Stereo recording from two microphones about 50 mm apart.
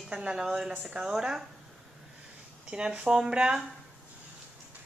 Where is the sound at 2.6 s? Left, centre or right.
Centre.